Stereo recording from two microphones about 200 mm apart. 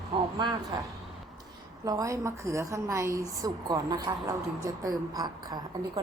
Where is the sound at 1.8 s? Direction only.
15° right (ahead or behind).